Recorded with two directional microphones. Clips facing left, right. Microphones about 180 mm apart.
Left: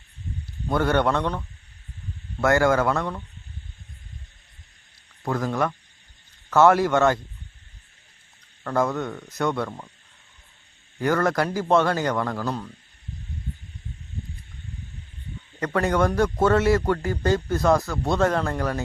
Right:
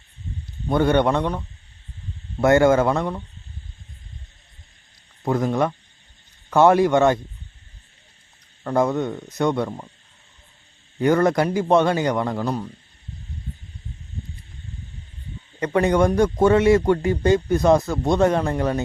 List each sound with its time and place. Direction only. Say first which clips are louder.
0.7 s a man's voice: right 3 dB; 20° right (ahead or behind)
5.2 s speech: right 4 dB; 20° right (ahead or behind)
8.6 s speech: right 4 dB; 20° right (ahead or behind)
11.0 s speech: right 4 dB; 20° right (ahead or behind)
15.6 s speech: right 4 dB; 20° right (ahead or behind)